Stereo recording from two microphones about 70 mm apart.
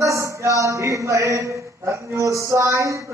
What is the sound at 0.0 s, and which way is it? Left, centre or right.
Speech, right.